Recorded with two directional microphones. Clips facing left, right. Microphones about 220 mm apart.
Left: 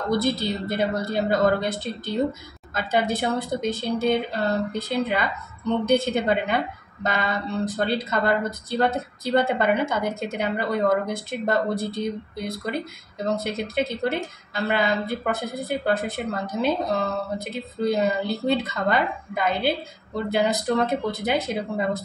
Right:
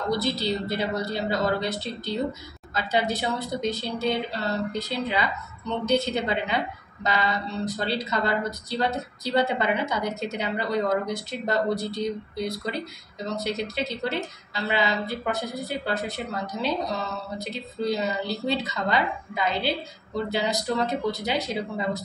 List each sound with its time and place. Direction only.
0.1 s a woman's voice: 50° left (ahead or behind)